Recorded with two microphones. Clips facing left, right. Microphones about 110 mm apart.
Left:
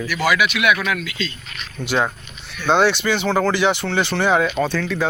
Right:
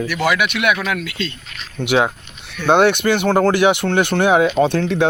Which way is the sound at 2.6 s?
60° right (ahead or behind).